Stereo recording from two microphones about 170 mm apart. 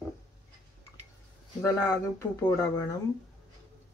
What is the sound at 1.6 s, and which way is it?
Speech, 20° left (ahead or behind).